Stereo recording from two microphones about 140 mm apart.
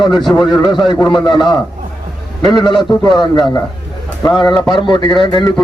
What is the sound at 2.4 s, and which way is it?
A man's voice, 30° left (ahead or behind).